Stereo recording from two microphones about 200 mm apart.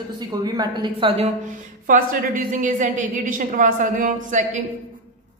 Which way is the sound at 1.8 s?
40° right (ahead or behind).